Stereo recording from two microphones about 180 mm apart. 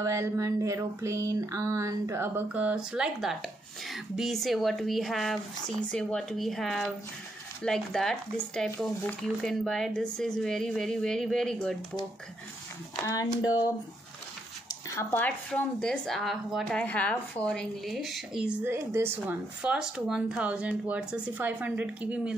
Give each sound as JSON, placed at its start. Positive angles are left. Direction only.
{"t": 0.0, "sound": "a sound", "side_deg": -15}
{"t": 3.9, "sound": "speech", "side_deg": 0}
{"t": 12.9, "sound": "speech", "side_deg": 20}
{"t": 15.0, "sound": "speech", "side_deg": 10}